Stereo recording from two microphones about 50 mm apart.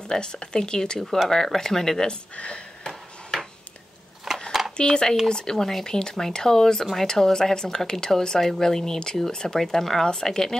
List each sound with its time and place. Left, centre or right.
0.1 s speech: centre
2.3 s speech: left
2.9 s ping: centre
4.5 s a sound: centre
4.7 s speech: centre